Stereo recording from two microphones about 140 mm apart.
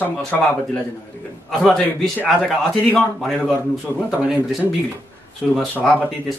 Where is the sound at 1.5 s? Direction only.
Centre (ahead or behind).